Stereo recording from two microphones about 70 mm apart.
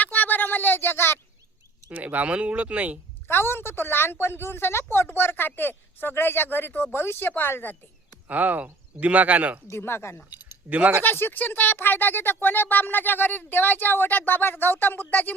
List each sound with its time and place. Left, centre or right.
0.0 s a sound: left
1.9 s speech: right
3.2 s speech: left
8.3 s speech: right
9.6 s speech: left
10.7 s speech: right
11.0 s speech: left